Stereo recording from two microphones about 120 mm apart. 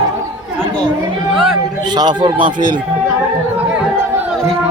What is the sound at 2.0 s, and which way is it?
Speech, 35° right (ahead or behind).